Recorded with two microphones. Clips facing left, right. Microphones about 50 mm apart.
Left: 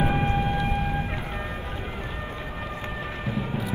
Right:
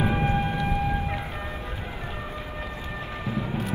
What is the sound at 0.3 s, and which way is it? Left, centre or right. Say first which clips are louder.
Whale vocalization: even; left.